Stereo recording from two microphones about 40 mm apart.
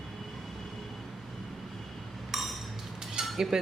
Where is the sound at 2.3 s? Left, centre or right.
Centre.